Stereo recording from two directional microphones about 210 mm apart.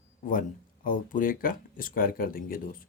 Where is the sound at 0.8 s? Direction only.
40° left (ahead or behind).